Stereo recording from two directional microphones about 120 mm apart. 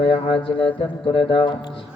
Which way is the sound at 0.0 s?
45° left (ahead or behind).